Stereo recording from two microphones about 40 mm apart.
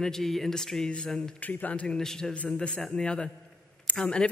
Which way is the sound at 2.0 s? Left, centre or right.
Centre.